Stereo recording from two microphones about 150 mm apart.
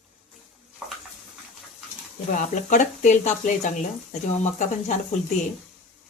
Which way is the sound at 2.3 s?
55° left (ahead or behind).